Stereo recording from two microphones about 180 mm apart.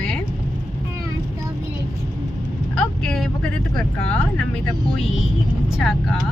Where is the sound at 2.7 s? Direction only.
5° left (ahead or behind).